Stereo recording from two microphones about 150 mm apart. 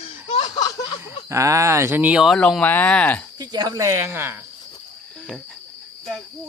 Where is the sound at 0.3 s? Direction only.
40° left (ahead or behind).